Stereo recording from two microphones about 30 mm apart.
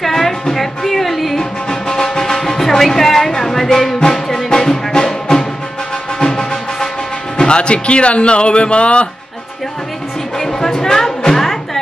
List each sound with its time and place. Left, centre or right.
0.0 s music: centre
1.7 s music: centre
4.5 s music: left
7.3 s speech: left
10.4 s music: centre